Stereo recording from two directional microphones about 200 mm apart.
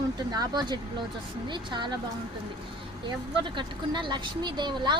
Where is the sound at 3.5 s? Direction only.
25° right (ahead or behind).